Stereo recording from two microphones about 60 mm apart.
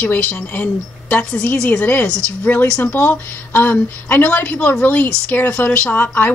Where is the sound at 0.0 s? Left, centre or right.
Left.